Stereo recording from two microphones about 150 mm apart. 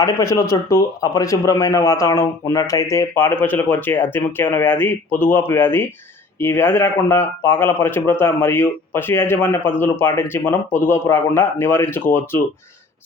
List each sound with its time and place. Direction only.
0.0 s speech: 20° left (ahead or behind)